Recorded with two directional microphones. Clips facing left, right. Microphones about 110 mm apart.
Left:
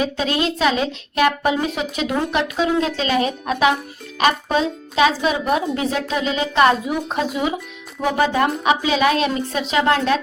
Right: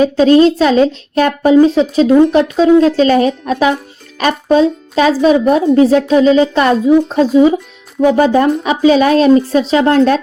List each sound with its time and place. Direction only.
0.0 s speech: 35° right (ahead or behind)